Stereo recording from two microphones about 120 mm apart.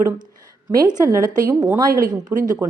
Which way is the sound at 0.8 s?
35° right (ahead or behind).